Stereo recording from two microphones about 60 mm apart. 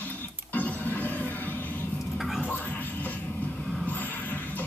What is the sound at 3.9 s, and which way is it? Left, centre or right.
Music, left.